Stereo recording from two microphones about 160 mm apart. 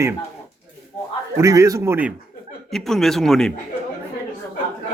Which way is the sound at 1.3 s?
20° right (ahead or behind).